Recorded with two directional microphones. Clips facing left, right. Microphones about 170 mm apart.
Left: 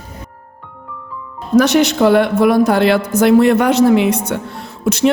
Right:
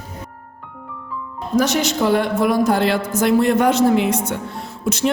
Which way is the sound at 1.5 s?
65° left (ahead or behind).